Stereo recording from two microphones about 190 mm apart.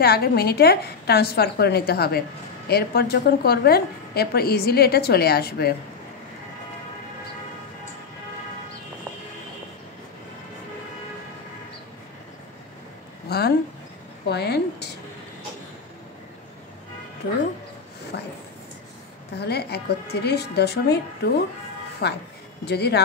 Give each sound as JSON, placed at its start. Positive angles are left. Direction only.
{"t": 0.0, "sound": "a woman's voice", "side_deg": 55}
{"t": 13.3, "sound": "a woman's voice", "side_deg": 55}
{"t": 18.1, "sound": "a sound", "side_deg": 65}
{"t": 19.3, "sound": "a woman's voice", "side_deg": 60}